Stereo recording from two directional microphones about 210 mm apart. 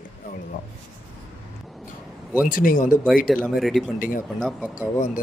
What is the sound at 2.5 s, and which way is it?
Speech, 40° left (ahead or behind).